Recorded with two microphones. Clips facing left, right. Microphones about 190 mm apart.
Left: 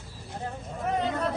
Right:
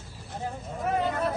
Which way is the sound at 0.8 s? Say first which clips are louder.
Right 1 dB; centre (ahead or behind).